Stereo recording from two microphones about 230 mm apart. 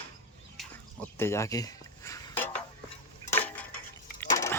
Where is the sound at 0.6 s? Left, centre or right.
Centre.